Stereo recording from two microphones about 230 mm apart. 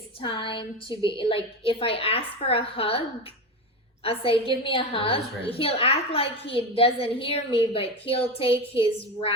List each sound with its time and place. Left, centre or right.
0.2 s a woman's voice: left
4.0 s a woman's voice: left